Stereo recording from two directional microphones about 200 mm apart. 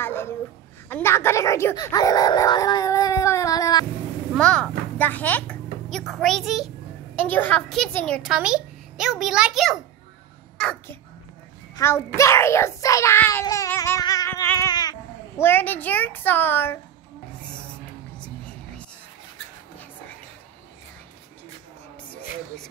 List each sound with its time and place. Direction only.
0.0 s a sound: 10° left (ahead or behind)
0.8 s speech: 10° left (ahead or behind)
4.4 s a child's voice: 5° left (ahead or behind)